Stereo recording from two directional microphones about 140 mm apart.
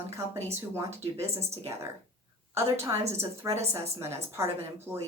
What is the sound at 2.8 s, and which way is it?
A woman's voice, 20° right (ahead or behind).